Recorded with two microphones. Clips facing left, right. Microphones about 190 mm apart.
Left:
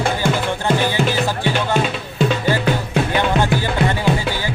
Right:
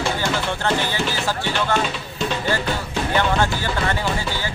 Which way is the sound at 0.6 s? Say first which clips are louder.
Left 6 dB; 15° left (ahead or behind).